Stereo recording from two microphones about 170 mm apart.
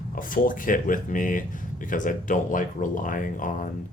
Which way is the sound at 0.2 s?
55° left (ahead or behind).